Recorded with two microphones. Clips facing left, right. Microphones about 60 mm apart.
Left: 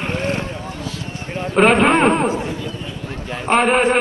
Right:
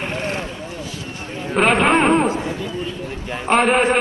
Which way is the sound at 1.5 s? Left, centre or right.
Centre.